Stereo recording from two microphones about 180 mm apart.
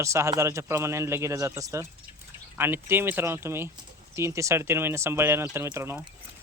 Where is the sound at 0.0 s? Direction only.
15° right (ahead or behind).